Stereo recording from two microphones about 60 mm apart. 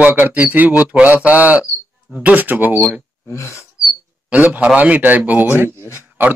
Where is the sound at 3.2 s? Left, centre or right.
Left.